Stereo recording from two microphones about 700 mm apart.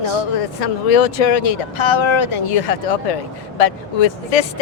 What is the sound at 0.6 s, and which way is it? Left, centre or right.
Speech, left.